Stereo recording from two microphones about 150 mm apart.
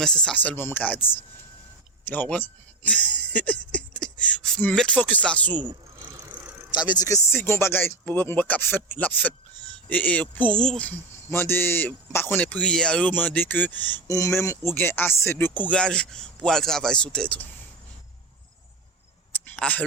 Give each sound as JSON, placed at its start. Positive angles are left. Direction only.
{"t": 0.0, "sound": "speech", "side_deg": 5}
{"t": 6.7, "sound": "speech", "side_deg": 30}
{"t": 19.5, "sound": "a sound", "side_deg": 10}